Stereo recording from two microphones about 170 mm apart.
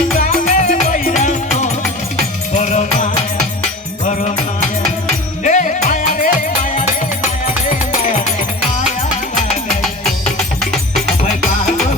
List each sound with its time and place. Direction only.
0.5 s music: 50° left (ahead or behind)
5.4 s music: 45° left (ahead or behind)
10.6 s music: centre (ahead or behind)